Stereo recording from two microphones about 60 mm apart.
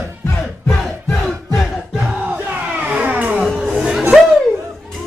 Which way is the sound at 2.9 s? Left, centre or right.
Right.